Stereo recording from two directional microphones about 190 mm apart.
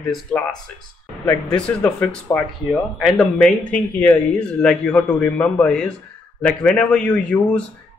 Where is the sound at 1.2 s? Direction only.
15° left (ahead or behind).